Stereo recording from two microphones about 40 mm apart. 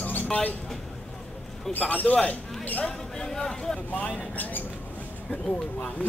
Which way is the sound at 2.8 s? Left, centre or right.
Centre.